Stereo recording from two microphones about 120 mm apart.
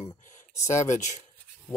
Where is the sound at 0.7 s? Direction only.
85° left.